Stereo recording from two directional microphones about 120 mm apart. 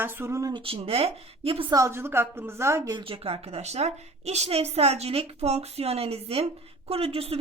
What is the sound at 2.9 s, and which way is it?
A woman's voice, 50° right (ahead or behind).